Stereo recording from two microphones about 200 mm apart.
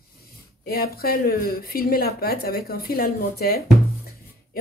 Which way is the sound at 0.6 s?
50° left (ahead or behind).